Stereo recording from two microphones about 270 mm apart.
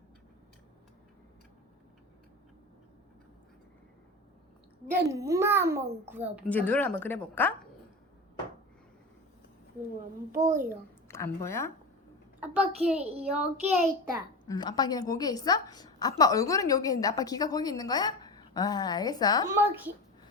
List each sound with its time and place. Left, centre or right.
4.9 s a child's voice: centre
6.5 s a woman's voice: centre
10.4 s a child's voice: right
11.1 s speech: centre
13.0 s a child's voice: right
13.3 s a child's voice: centre
14.4 s a woman's voice: centre
19.5 s a child's voice: centre